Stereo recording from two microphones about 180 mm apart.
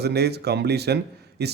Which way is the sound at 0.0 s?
65° right (ahead or behind).